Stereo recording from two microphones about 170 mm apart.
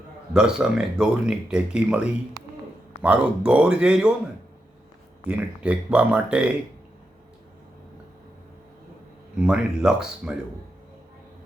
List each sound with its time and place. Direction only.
0.3 s speech: 5° right (ahead or behind)
5.6 s speech: 5° right (ahead or behind)
9.4 s speech: 5° right (ahead or behind)